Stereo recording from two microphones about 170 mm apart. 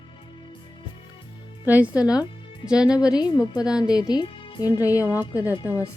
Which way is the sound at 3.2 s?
25° left (ahead or behind).